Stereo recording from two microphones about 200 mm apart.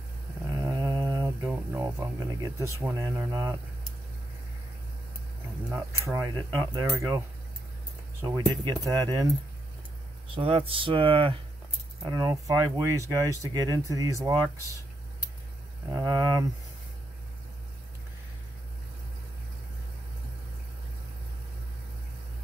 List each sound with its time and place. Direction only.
0.5 s a sound: 20° right (ahead or behind)
5.7 s speech: 15° right (ahead or behind)
10.3 s speech: 25° right (ahead or behind)
12.3 s speech: 15° right (ahead or behind)
15.9 s speech: 20° right (ahead or behind)